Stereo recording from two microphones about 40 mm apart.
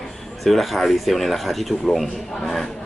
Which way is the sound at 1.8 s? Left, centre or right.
Centre.